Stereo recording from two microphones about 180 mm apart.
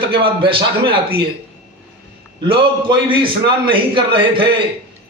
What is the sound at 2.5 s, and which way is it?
A man's voice, 30° right (ahead or behind).